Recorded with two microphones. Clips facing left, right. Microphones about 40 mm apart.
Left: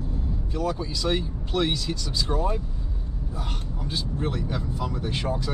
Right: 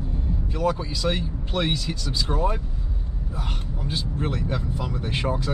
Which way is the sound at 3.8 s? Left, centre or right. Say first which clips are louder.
Right 1 dB; centre.